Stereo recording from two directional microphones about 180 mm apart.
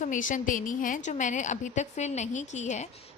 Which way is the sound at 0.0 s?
45° left (ahead or behind).